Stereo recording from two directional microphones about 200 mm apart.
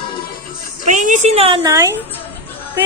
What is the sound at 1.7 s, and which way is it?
Speech, 15° right (ahead or behind).